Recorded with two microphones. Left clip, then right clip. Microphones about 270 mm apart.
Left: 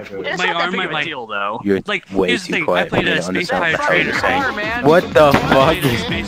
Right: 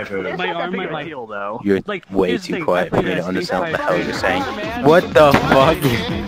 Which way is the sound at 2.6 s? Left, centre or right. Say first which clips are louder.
Even; centre.